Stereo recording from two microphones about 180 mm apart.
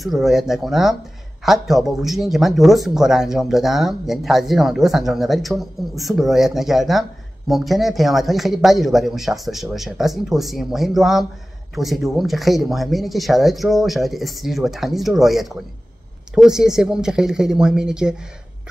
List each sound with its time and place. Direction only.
0.0 s speech: centre (ahead or behind)